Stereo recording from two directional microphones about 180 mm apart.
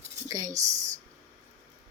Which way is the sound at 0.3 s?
20° right (ahead or behind).